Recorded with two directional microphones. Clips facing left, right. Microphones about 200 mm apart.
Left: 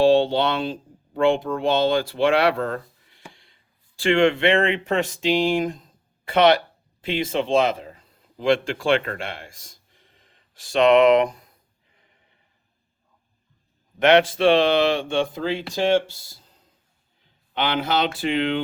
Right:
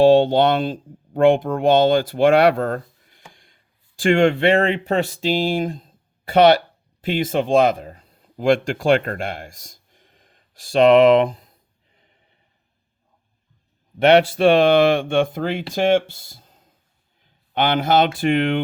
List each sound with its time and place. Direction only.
0.0 s speech: 45° right (ahead or behind)
14.3 s speech: 45° right (ahead or behind)
17.5 s speech: 45° right (ahead or behind)